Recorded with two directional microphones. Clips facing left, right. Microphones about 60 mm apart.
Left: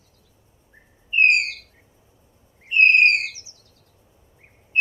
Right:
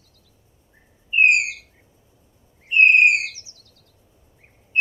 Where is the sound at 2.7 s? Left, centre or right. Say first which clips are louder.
Right 1 dB; centre.